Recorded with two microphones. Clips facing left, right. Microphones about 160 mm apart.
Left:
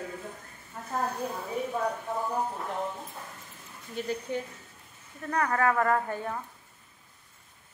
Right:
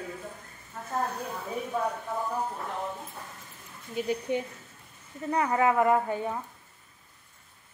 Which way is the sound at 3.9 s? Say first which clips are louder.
Right 3 dB; 15° right (ahead or behind).